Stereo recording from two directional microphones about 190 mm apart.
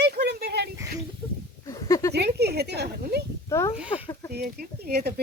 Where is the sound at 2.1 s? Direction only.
60° right (ahead or behind).